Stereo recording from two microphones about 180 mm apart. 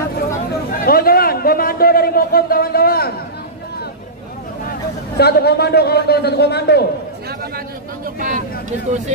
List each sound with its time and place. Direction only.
0.5 s a sound: 55° left (ahead or behind)
5.1 s a man's voice: 65° left (ahead or behind)
8.2 s speech: 45° right (ahead or behind)